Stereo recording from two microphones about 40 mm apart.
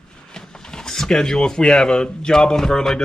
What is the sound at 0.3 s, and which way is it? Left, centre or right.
Speech, centre.